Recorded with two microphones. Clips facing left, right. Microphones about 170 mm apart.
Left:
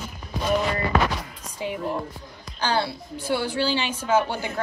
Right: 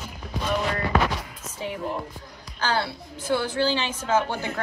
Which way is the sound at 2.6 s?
15° left (ahead or behind).